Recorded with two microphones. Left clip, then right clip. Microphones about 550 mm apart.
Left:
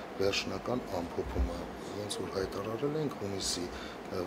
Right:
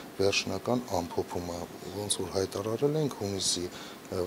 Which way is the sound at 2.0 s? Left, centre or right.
Right.